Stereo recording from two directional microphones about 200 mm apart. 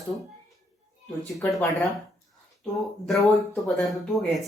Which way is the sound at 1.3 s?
Centre (ahead or behind).